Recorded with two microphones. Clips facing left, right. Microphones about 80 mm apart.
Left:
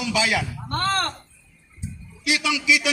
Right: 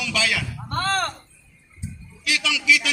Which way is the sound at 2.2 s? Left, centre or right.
Left.